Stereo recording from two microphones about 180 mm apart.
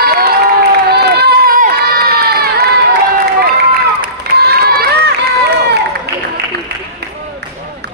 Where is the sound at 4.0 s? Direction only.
60° right (ahead or behind).